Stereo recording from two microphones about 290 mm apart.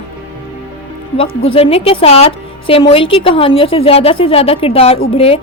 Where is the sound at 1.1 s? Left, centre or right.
Centre.